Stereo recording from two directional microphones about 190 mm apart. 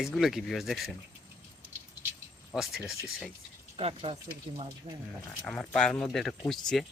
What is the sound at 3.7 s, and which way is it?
Speech, 30° right (ahead or behind).